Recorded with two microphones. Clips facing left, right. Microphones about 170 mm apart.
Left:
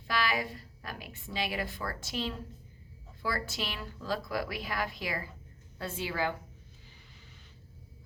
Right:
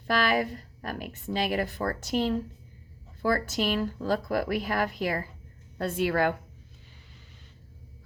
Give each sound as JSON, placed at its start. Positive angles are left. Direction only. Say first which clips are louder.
{"t": 0.2, "sound": "a woman's voice", "louder": "right 4 dB", "side_deg": -50}